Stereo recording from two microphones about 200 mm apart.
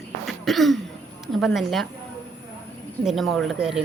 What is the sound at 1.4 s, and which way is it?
Speech, centre (ahead or behind).